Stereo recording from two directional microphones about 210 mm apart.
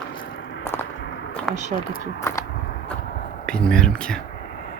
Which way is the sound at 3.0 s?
45° left (ahead or behind).